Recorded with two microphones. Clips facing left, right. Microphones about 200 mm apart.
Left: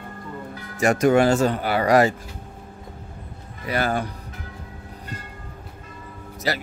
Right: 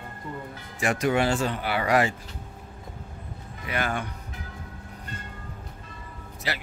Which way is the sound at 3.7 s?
35° left (ahead or behind).